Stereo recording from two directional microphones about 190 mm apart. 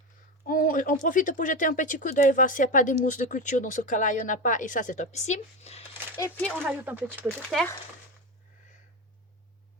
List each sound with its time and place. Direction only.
0.4 s a sound: 45° left (ahead or behind)
1.0 s speech: 45° left (ahead or behind)
6.4 s speech: 5° left (ahead or behind)
6.7 s speech: 10° right (ahead or behind)
7.5 s speech: centre (ahead or behind)